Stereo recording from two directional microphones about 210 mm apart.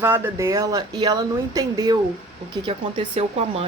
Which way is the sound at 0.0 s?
10° right (ahead or behind).